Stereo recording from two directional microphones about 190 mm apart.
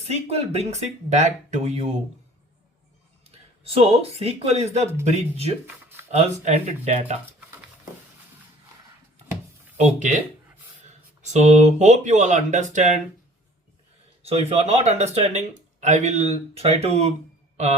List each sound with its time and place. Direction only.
0.1 s speech: 35° right (ahead or behind)
3.2 s speech: 30° right (ahead or behind)
9.7 s speech: 40° right (ahead or behind)
11.2 s speech: 35° right (ahead or behind)
14.3 s speech: 35° right (ahead or behind)